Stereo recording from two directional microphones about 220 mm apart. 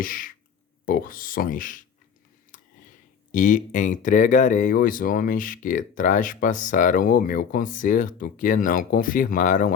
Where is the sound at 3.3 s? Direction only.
35° left (ahead or behind).